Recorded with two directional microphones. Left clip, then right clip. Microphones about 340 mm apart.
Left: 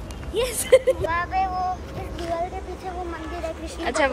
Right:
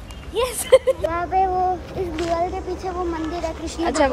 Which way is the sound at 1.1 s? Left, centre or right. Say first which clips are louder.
Right 3 dB; centre.